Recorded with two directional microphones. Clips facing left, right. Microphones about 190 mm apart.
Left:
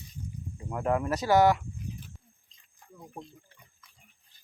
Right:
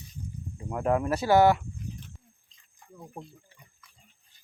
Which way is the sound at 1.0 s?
25° right (ahead or behind).